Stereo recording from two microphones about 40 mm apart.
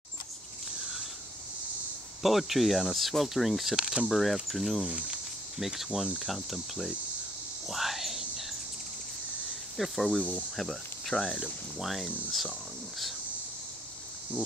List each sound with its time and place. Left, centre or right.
2.2 s speech: centre
3.7 s speech: centre
4.1 s speech: centre
4.8 s speech: right
5.6 s speech: centre
7.6 s whispering: centre
9.8 s speech: centre
11.3 s speech: centre